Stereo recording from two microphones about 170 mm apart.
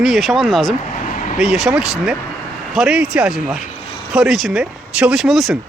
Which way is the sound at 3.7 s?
45° left (ahead or behind).